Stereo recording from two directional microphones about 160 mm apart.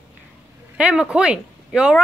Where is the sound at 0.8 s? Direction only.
5° right (ahead or behind).